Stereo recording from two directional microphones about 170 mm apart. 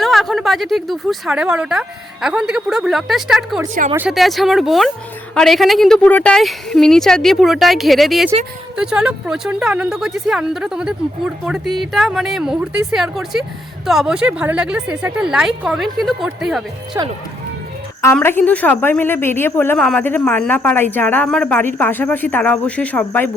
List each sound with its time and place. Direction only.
0.0 s a woman's voice: centre (ahead or behind)
16.9 s speech: 15° right (ahead or behind)
18.0 s a woman's voice: 15° left (ahead or behind)